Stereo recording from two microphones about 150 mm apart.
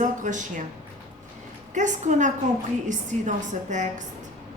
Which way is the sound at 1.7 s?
55° right (ahead or behind).